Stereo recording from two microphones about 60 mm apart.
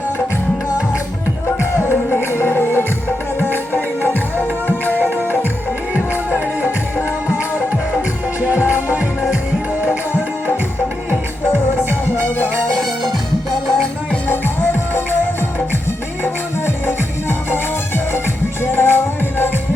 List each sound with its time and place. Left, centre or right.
1.9 s music: left
8.4 s music: right
14.3 s music: left
16.2 s music: left